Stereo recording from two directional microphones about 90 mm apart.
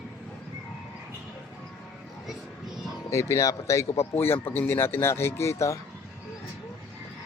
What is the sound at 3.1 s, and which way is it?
Speech, 35° left (ahead or behind).